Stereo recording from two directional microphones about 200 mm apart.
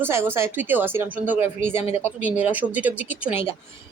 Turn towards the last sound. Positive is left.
turn(degrees=-10)  # may be behind; listen again after turning